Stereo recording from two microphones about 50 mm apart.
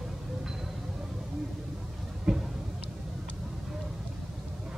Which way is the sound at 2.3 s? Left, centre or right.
Centre.